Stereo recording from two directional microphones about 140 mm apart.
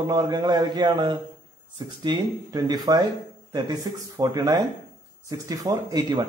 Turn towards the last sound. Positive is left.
turn(degrees=-25)  # may be behind; listen again after turning